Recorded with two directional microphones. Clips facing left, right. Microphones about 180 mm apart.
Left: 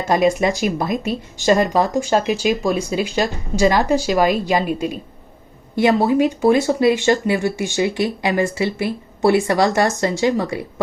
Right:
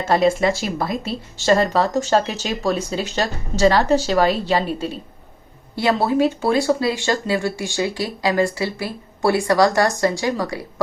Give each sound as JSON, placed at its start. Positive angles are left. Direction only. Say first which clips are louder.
{"t": 0.0, "sound": "speech", "louder": "left 1 dB", "side_deg": 15}